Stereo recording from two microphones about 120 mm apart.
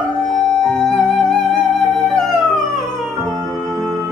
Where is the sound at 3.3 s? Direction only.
25° right (ahead or behind).